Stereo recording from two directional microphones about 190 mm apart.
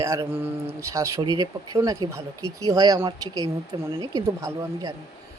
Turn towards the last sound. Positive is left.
turn(degrees=-15)  # may be behind; listen again after turning